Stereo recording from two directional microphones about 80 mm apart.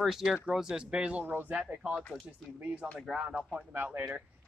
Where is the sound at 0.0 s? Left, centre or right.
Centre.